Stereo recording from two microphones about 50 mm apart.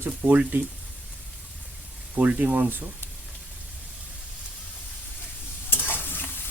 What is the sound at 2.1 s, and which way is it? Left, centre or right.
Speech, right.